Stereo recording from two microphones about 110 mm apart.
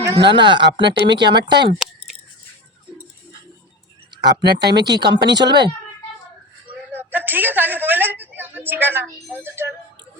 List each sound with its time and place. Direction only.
0.3 s speech: 45° right (ahead or behind)
4.2 s speech: 40° right (ahead or behind)
6.9 s a woman's voice: 15° right (ahead or behind)